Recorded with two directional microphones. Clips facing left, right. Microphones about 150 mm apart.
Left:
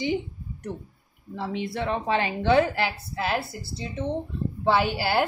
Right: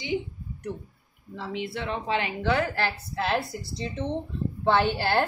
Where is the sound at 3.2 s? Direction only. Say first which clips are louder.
Even; 5° left (ahead or behind).